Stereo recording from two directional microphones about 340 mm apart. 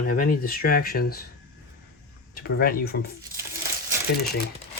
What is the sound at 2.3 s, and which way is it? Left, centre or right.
Speech, left.